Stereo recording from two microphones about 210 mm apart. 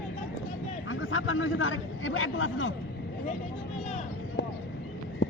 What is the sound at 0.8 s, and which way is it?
A man's voice, 70° left (ahead or behind).